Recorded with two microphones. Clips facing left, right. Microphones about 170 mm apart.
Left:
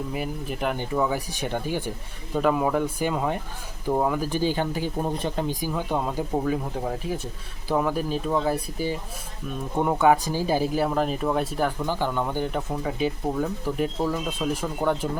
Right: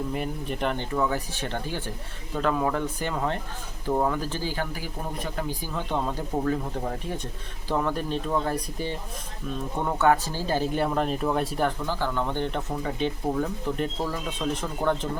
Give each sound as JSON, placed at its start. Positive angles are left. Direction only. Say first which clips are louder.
{"t": 0.1, "sound": "speech", "louder": "even", "side_deg": 5}
{"t": 5.5, "sound": "speech", "louder": "left 3 dB", "side_deg": 10}
{"t": 11.9, "sound": "speech", "louder": "left 2 dB", "side_deg": 15}